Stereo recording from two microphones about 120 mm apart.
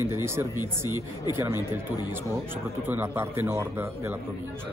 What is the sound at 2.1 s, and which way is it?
A man's voice, 20° right (ahead or behind).